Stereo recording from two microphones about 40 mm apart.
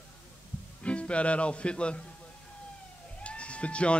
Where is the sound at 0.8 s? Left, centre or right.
Left.